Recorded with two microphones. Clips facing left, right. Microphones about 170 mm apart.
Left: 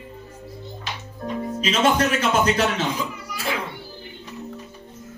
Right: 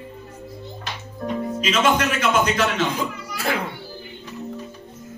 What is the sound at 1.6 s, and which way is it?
A man's voice, 35° left (ahead or behind).